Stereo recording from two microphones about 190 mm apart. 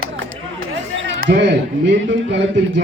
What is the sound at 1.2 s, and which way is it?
Speech, 65° right (ahead or behind).